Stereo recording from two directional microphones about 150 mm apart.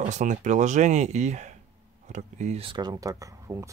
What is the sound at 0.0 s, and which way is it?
Speech, 55° right (ahead or behind).